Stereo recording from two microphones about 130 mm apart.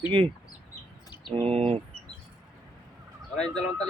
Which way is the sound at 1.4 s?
50° right (ahead or behind).